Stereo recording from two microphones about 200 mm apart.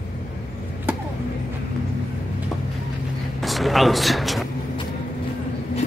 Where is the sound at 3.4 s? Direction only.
Centre (ahead or behind).